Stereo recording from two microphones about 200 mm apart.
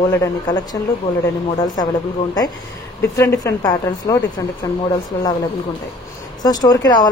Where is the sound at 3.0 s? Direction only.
15° left (ahead or behind).